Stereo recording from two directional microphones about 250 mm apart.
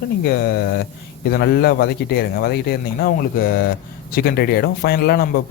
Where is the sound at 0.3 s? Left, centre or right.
Left.